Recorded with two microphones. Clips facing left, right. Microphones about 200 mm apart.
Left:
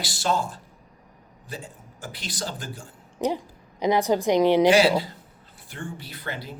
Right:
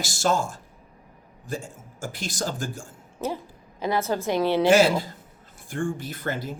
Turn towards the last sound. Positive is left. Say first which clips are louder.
# right 5 dB
turn(degrees=-45)  # may be behind; listen again after turning